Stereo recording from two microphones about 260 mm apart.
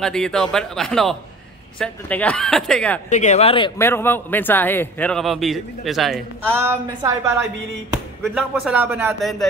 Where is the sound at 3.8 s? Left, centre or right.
Centre.